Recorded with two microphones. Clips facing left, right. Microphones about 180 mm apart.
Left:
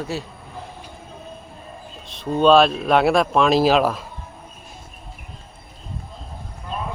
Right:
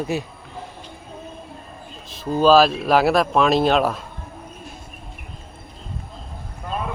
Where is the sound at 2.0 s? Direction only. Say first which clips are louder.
Even; centre (ahead or behind).